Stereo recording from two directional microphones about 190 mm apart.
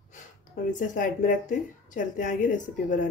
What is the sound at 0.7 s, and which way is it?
Speech, 40° left (ahead or behind).